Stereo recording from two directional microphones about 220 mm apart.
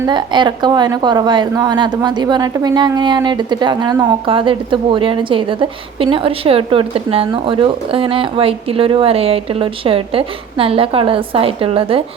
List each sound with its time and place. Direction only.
0.0 s a woman's voice: 20° right (ahead or behind)